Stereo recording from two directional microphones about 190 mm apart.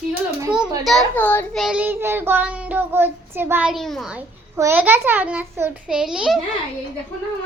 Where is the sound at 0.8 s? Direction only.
5° left (ahead or behind).